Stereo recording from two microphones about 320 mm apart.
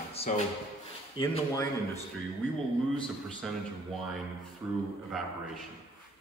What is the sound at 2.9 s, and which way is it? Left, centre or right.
Speech, centre.